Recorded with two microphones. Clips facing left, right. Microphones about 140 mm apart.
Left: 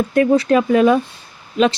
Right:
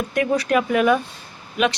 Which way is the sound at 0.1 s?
30° left (ahead or behind).